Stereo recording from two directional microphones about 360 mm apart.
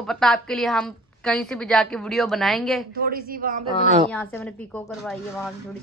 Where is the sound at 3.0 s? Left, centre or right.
Right.